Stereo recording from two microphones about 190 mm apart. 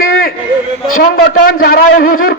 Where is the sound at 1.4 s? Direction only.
50° left (ahead or behind).